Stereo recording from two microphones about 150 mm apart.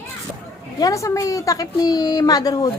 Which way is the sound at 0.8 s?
20° left (ahead or behind).